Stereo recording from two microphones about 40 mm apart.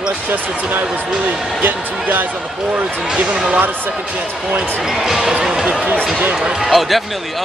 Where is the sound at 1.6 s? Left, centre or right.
Right.